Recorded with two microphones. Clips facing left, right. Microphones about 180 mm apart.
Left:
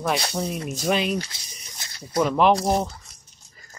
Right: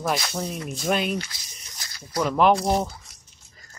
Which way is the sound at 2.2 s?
Centre (ahead or behind).